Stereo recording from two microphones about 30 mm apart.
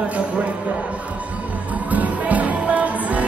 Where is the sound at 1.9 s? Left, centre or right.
Right.